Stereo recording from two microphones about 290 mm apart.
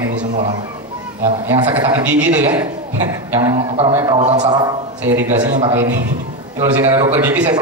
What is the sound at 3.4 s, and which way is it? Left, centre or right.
Speech, centre.